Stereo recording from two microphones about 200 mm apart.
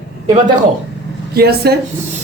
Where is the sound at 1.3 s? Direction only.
50° right (ahead or behind).